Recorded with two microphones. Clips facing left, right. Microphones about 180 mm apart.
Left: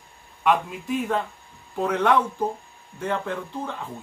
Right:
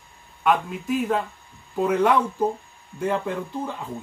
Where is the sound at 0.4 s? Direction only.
Centre (ahead or behind).